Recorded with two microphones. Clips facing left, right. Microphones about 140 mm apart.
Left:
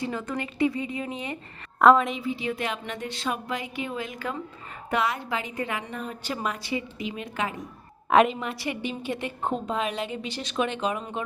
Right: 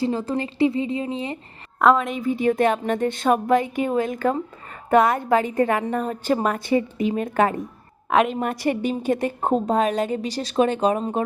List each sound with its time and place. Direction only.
0.0 s a woman's voice: 30° right (ahead or behind)
1.8 s a woman's voice: centre (ahead or behind)
2.2 s a woman's voice: 50° right (ahead or behind)
8.1 s a woman's voice: centre (ahead or behind)
8.4 s a woman's voice: 45° right (ahead or behind)